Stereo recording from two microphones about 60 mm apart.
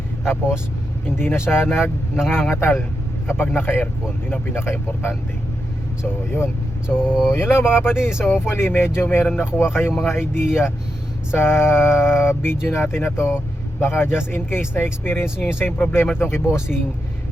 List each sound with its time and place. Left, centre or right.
0.3 s speech: left
2.1 s speech: centre
2.4 s speech: left
7.0 s speech: centre
7.3 s speech: left